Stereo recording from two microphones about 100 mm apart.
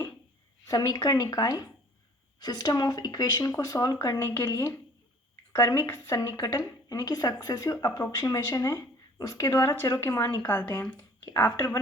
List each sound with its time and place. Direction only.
0.7 s speech: 40° left (ahead or behind); by 10.8 s 20° left (ahead or behind)